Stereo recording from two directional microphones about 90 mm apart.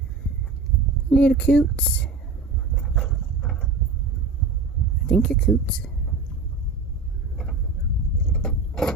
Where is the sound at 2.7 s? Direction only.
Centre (ahead or behind).